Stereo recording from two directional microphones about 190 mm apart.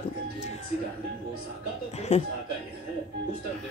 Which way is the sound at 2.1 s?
35° left (ahead or behind).